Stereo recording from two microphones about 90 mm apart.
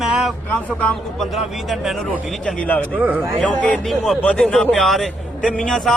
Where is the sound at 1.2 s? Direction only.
Centre (ahead or behind).